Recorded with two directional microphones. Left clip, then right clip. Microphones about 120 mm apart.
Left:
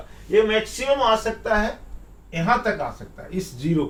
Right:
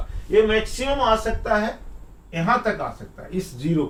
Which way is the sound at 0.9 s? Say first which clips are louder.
Right 1 dB; 5° right (ahead or behind).